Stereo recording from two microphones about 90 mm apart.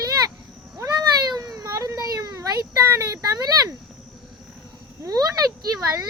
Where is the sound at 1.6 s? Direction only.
35° right (ahead or behind).